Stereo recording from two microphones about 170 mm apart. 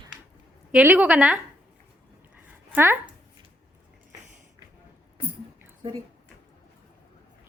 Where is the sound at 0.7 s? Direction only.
10° right (ahead or behind).